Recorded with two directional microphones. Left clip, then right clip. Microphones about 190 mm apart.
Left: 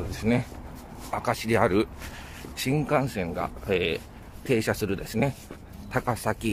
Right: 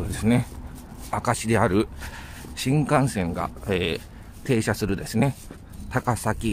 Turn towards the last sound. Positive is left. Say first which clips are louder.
# right 2 dB
turn(degrees=-15)  # may be behind; listen again after turning